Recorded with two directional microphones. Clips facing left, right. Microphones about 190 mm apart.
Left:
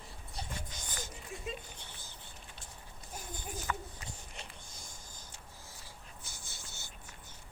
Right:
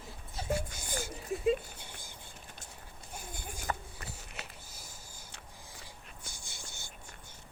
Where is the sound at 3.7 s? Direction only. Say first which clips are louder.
Right 2 dB; 40° right (ahead or behind).